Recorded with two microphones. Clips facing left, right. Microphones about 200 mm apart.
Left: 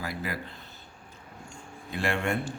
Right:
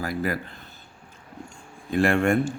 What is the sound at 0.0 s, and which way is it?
Speech, 50° right (ahead or behind).